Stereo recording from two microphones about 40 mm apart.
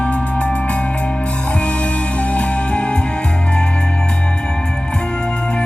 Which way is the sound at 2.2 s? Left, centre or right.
Left.